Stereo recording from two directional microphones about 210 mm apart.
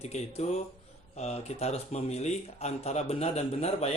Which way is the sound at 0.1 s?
30° left (ahead or behind).